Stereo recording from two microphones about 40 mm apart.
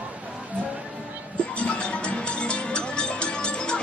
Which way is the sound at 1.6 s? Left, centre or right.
Left.